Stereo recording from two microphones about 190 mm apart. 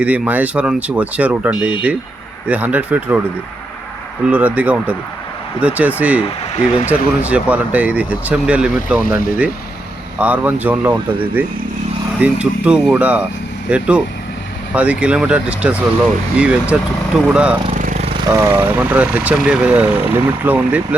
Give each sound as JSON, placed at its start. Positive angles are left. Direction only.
{"t": 0.0, "sound": "speech", "side_deg": -5}
{"t": 4.3, "sound": "speech", "side_deg": -5}
{"t": 9.0, "sound": "speech", "side_deg": 50}
{"t": 10.2, "sound": "speech", "side_deg": -10}
{"t": 17.7, "sound": "a sound", "side_deg": -40}
{"t": 18.3, "sound": "speech", "side_deg": -15}